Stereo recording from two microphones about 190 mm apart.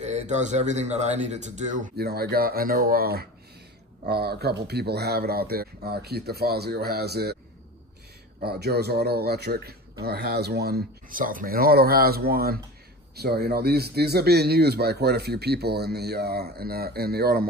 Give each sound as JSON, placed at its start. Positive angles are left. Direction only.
{"t": 0.0, "sound": "speech", "side_deg": -35}
{"t": 2.0, "sound": "speech", "side_deg": -55}
{"t": 8.4, "sound": "speech", "side_deg": -55}